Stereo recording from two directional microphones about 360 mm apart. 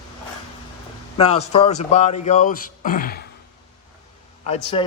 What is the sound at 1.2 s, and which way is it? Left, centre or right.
Speech, centre.